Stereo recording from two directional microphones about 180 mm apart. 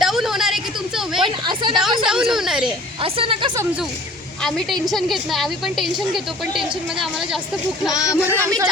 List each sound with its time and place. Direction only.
0.0 s a sound: centre (ahead or behind)
1.2 s a sound: 25° right (ahead or behind)
2.0 s a woman's voice: 5° right (ahead or behind)
3.0 s a woman's voice: 30° right (ahead or behind)
4.4 s a woman's voice: 5° left (ahead or behind)
7.9 s speech: 20° left (ahead or behind)
8.3 s speech: 15° right (ahead or behind)